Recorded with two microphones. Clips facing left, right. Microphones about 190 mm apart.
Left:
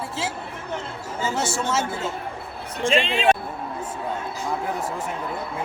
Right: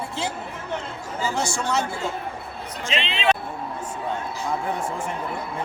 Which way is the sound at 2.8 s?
50° left (ahead or behind).